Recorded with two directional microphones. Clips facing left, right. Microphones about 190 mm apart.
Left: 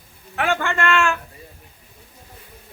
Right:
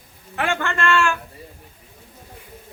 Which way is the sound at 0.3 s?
Centre (ahead or behind).